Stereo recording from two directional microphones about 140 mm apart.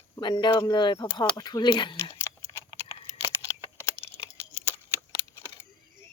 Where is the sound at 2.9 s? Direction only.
45° left (ahead or behind).